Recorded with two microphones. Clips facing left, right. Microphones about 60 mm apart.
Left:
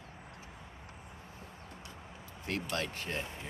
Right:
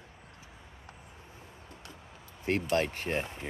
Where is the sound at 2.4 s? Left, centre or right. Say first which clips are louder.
Right 8 dB; right.